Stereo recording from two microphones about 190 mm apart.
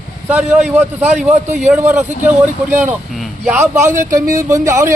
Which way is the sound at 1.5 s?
40° right (ahead or behind).